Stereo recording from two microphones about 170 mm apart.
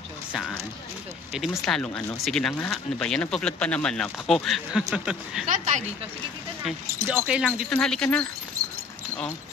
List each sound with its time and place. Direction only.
1.3 s speech: centre (ahead or behind)
5.5 s speech: 45° right (ahead or behind)
6.6 s speech: 5° right (ahead or behind)
7.4 s speech: 5° left (ahead or behind)